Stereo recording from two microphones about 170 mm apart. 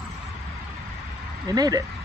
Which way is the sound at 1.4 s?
20° right (ahead or behind).